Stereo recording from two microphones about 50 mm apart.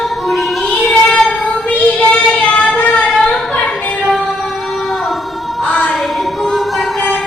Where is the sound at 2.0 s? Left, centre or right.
Left.